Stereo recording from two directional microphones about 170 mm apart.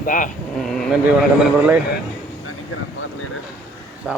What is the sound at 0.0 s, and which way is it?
Speech, 50° left (ahead or behind).